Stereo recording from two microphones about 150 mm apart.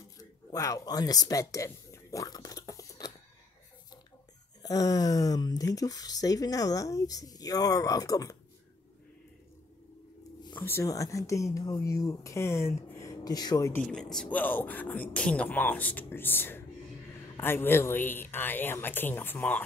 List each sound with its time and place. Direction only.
0.2 s speech: 25° left (ahead or behind)
4.6 s speech: 25° left (ahead or behind)
10.6 s speech: 15° left (ahead or behind)
13.7 s speech: 5° left (ahead or behind)